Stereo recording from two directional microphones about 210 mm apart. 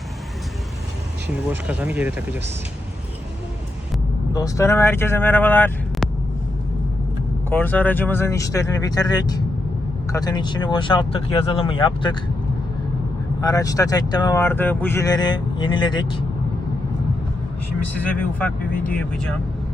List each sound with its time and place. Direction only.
1.5 s speech: 5° right (ahead or behind)
4.4 s speech: 15° left (ahead or behind)
7.5 s speech: 10° left (ahead or behind); by 12.1 s 25° left (ahead or behind)
13.4 s speech: 15° left (ahead or behind)
18.0 s speech: 5° left (ahead or behind)